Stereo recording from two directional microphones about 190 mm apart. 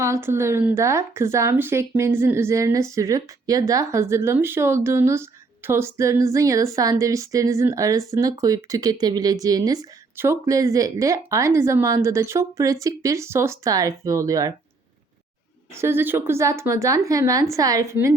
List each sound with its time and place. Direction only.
0.0 s speech: 15° right (ahead or behind)
15.7 s speech: 10° right (ahead or behind)